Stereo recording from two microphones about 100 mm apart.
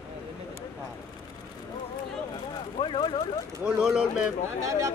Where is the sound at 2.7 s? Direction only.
60° left (ahead or behind).